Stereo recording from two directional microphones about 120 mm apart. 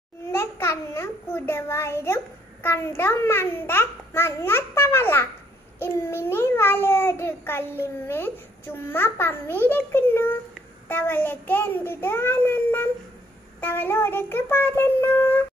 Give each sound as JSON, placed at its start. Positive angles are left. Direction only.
{"t": 0.3, "sound": "a child's voice", "side_deg": 20}
{"t": 10.9, "sound": "child singing", "side_deg": 15}